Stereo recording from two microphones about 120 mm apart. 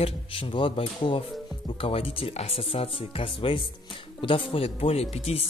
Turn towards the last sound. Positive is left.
turn(degrees=55)  # may be behind; listen again after turning